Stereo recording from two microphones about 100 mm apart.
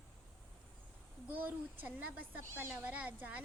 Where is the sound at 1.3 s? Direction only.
15° right (ahead or behind).